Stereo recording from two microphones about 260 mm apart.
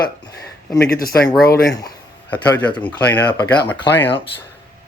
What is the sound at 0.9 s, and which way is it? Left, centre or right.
Speech, left.